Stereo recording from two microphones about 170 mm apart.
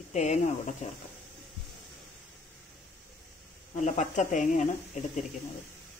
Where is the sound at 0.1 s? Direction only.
45° left (ahead or behind).